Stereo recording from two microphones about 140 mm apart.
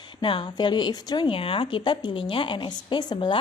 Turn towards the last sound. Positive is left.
turn(degrees=35)  # may be behind; listen again after turning